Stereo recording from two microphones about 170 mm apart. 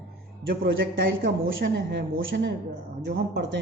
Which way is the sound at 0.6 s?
65° right (ahead or behind).